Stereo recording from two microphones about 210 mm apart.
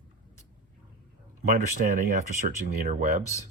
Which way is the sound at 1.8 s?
40° right (ahead or behind).